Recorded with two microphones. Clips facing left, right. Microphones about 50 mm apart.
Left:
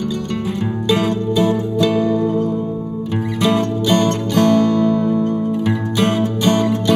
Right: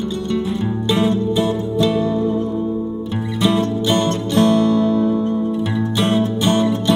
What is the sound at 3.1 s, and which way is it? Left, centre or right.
Music, left.